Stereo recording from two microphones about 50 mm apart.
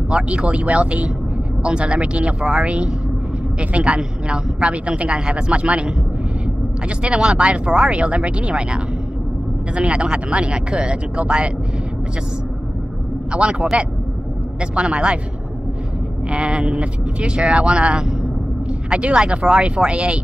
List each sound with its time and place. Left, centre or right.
0.1 s a woman's voice: right
7.0 s a woman's voice: centre
13.3 s a woman's voice: centre
16.3 s a woman's voice: right